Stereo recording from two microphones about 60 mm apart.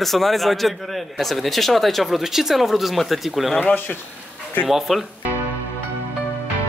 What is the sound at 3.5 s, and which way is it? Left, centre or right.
Speech, left.